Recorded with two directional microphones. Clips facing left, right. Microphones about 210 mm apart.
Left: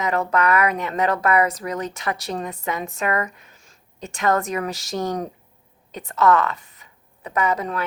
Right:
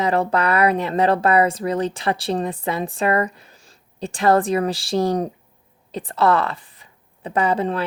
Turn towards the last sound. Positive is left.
turn(degrees=-30)  # may be behind; listen again after turning